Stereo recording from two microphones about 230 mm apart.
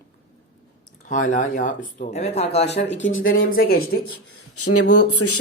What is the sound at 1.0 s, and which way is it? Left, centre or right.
Speech, left.